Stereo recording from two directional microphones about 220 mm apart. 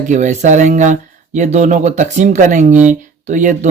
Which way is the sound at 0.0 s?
35° right (ahead or behind).